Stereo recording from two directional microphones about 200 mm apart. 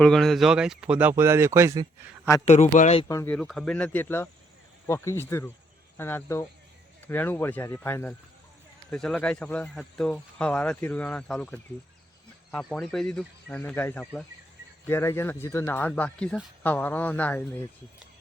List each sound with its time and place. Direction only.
0.0 s speech: centre (ahead or behind); by 1.9 s 15° right (ahead or behind)
2.4 s speech: 35° left (ahead or behind)
3.1 s speech: 15° left (ahead or behind)
3.3 s speech: 5° left (ahead or behind)